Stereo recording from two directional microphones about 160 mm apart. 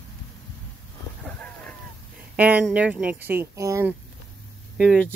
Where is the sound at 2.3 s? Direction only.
10° right (ahead or behind).